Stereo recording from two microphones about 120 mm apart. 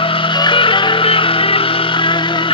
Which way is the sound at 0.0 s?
45° left (ahead or behind).